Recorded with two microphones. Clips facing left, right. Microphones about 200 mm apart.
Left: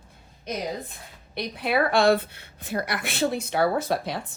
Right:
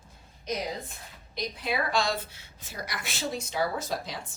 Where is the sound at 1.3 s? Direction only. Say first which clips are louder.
Left 6 dB; 60° left (ahead or behind).